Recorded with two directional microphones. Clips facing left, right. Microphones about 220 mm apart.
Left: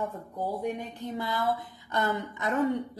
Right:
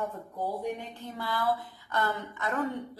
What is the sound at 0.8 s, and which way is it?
A woman's voice, 20° left (ahead or behind).